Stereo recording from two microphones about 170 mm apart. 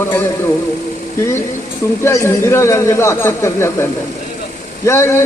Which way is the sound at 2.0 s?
15° left (ahead or behind).